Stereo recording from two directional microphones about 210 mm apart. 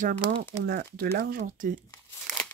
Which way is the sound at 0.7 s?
50° right (ahead or behind).